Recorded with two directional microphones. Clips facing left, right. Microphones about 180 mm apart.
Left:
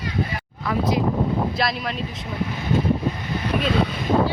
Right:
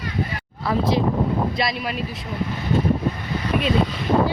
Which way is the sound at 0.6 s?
30° right (ahead or behind).